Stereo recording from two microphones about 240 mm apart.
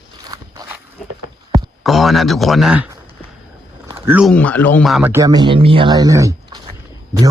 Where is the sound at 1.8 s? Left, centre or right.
Centre.